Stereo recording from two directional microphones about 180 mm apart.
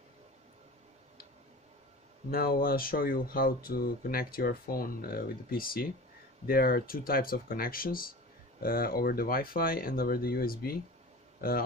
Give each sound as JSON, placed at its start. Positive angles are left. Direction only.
{"t": 2.3, "sound": "speech", "side_deg": 55}